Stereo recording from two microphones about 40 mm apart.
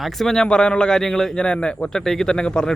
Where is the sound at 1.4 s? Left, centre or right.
Left.